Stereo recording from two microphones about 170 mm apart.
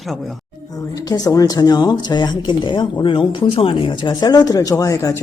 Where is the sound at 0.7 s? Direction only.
20° left (ahead or behind).